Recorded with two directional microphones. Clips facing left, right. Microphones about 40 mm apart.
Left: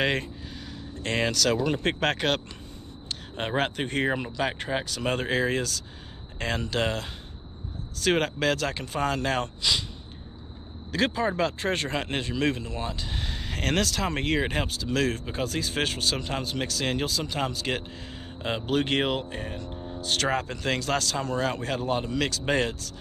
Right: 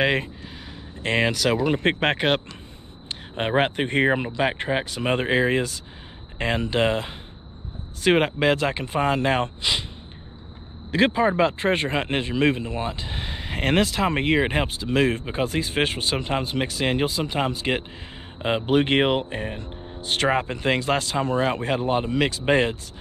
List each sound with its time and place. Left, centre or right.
0.0 s speech: centre
10.9 s speech: right